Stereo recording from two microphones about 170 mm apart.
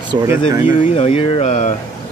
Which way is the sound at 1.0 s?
35° left (ahead or behind).